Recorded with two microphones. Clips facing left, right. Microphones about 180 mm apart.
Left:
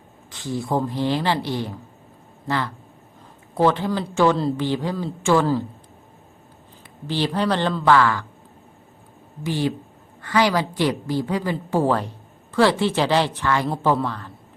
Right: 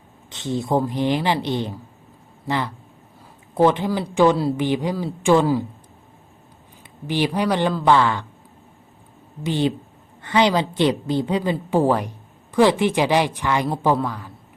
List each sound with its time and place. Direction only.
0.3 s a woman's voice: 20° right (ahead or behind)
7.1 s a woman's voice: 15° right (ahead or behind)
9.4 s a woman's voice: 20° right (ahead or behind)